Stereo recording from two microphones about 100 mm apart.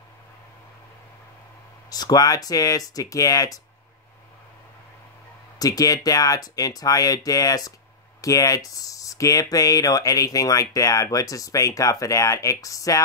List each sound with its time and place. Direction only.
1.9 s speech: 40° left (ahead or behind)
5.6 s speech: 35° left (ahead or behind)